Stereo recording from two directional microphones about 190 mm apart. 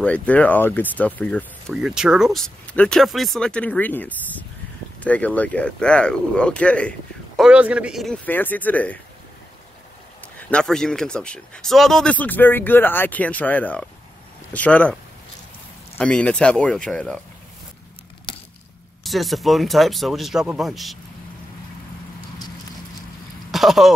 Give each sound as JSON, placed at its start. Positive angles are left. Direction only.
{"t": 0.0, "sound": "speech", "side_deg": 5}
{"t": 1.7, "sound": "speech", "side_deg": -5}
{"t": 10.5, "sound": "speech", "side_deg": 5}
{"t": 16.0, "sound": "speech", "side_deg": 5}
{"t": 18.3, "sound": "a sound", "side_deg": 25}
{"t": 19.0, "sound": "speech", "side_deg": 0}
{"t": 23.5, "sound": "a sound", "side_deg": 0}